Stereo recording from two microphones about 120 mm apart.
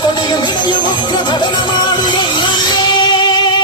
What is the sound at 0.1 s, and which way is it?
Music, 40° left (ahead or behind).